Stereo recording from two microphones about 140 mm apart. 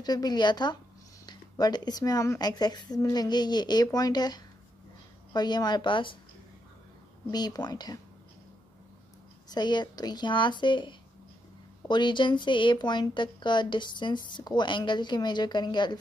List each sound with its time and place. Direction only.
0.0 s speech: 30° left (ahead or behind)
7.2 s speech: 30° left (ahead or behind)
9.5 s speech: 30° left (ahead or behind)